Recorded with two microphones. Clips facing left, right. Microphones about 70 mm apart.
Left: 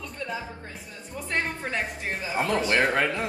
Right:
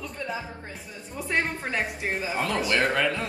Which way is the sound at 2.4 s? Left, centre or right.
Left.